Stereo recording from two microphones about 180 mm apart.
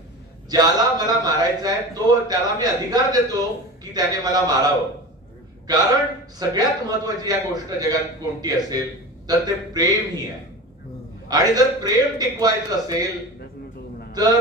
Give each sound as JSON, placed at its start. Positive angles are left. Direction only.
{"t": 0.5, "sound": "a man's voice", "side_deg": -20}
{"t": 5.7, "sound": "a man's voice", "side_deg": -20}
{"t": 11.2, "sound": "a man's voice", "side_deg": -20}